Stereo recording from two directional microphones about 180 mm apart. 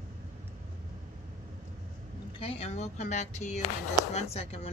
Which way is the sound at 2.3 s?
35° left (ahead or behind).